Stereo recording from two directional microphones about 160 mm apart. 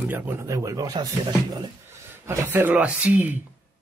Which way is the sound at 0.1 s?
10° right (ahead or behind).